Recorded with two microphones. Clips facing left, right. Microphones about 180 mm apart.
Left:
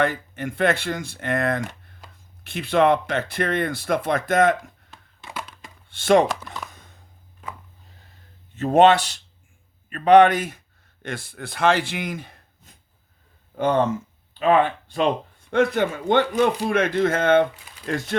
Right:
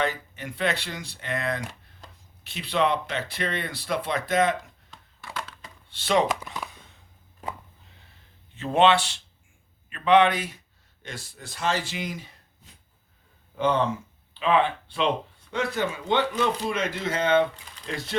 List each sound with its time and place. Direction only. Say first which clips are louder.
0.0 s speech: left 5 dB; 50° left (ahead or behind)
5.2 s wood: left 1 dB; 15° left (ahead or behind)
5.9 s speech: left 6 dB; 50° left (ahead or behind)
6.2 s speech: even; 10° right (ahead or behind)
8.5 s speech: left 5 dB; 45° left (ahead or behind)